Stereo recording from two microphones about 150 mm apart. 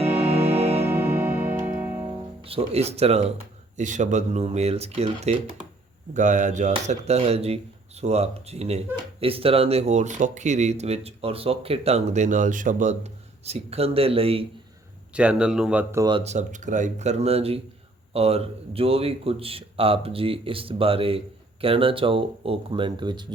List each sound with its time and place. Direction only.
0.2 s music: 45° right (ahead or behind)
0.9 s music: 15° right (ahead or behind)
2.4 s speech: 40° right (ahead or behind)
3.8 s speech: 55° right (ahead or behind)
6.1 s speech: 55° right (ahead or behind); by 14.4 s 40° right (ahead or behind)
15.1 s speech: 5° right (ahead or behind)
16.2 s a man's voice: 50° right (ahead or behind); by 23.3 s 30° right (ahead or behind)